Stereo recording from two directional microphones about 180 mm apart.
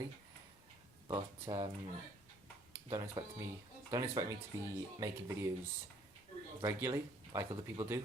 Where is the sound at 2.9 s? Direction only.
30° right (ahead or behind).